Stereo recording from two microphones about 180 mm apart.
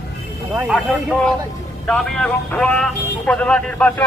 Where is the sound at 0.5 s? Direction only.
5° right (ahead or behind).